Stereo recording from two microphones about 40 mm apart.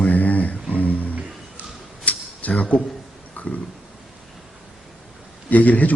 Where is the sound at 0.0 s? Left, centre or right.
Left.